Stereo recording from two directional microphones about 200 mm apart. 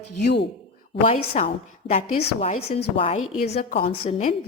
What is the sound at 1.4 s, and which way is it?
A woman's voice, 30° left (ahead or behind).